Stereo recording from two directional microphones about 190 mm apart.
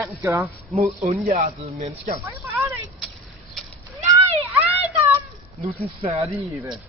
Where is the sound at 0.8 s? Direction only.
35° right (ahead or behind).